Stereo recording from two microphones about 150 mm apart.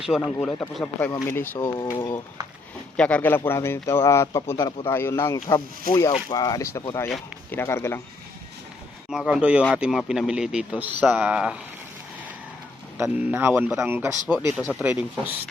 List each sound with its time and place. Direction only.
0.3 s a man's voice: 5° left (ahead or behind); by 2.0 s 20° left (ahead or behind)
3.0 s speech: 10° left (ahead or behind)
9.0 s a man's voice: 5° right (ahead or behind)
13.0 s speech: 15° right (ahead or behind)